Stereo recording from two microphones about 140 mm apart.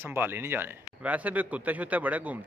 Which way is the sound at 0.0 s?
15° right (ahead or behind).